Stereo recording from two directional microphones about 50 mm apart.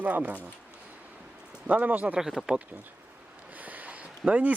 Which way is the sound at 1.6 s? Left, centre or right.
Right.